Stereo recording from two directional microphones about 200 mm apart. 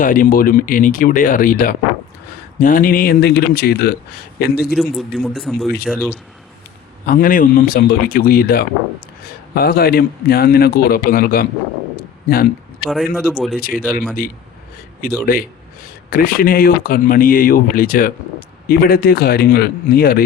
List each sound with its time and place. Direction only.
0.0 s speech: 45° left (ahead or behind)
4.7 s a man's voice: centre (ahead or behind)
7.0 s speech: 45° left (ahead or behind)
12.8 s a man's voice: centre (ahead or behind)
13.6 s speech: 45° left (ahead or behind)
15.0 s speech: 45° left (ahead or behind)